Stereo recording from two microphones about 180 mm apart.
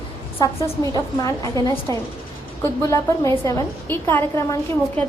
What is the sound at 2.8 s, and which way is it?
A woman's voice, 15° left (ahead or behind).